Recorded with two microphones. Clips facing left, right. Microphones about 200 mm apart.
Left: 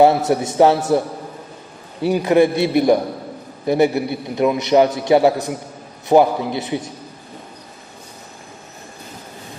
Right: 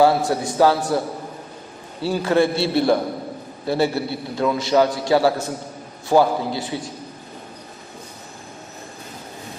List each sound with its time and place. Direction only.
0.0 s a man's voice: 20° left (ahead or behind)